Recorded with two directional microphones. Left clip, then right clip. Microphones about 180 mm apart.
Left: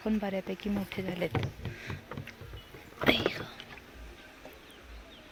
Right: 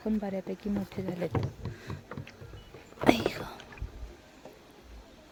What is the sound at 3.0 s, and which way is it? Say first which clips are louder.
Speech: right 2 dB; 45° right (ahead or behind).